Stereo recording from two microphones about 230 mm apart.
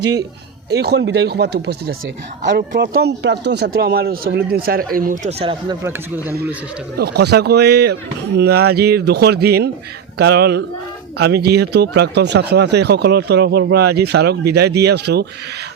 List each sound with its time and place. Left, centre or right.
0.8 s speech: right
6.9 s speech: right